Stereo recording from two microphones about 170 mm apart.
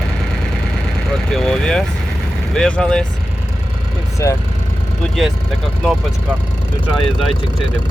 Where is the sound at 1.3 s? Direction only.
5° left (ahead or behind).